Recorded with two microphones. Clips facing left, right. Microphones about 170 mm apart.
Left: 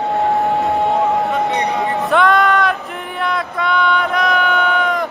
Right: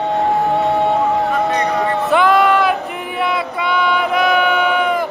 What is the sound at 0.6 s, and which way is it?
Music, centre (ahead or behind).